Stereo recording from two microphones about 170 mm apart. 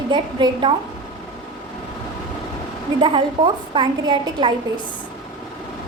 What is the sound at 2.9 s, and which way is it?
A woman's voice, 30° right (ahead or behind).